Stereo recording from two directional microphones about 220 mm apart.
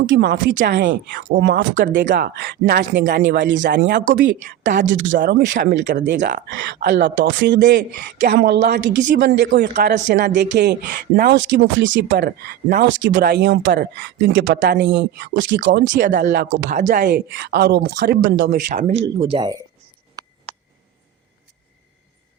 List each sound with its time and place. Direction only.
0.0 s speech: 55° right (ahead or behind); by 10.2 s 35° right (ahead or behind)
10.2 s speech: 50° right (ahead or behind)
17.1 s speech: 50° right (ahead or behind)
18.5 s speech: 35° right (ahead or behind)
19.2 s speech: 25° right (ahead or behind)